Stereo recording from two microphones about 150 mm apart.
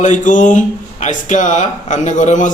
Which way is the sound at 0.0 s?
55° left (ahead or behind).